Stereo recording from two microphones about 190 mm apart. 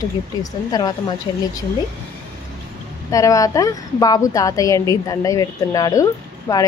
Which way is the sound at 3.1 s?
15° left (ahead or behind).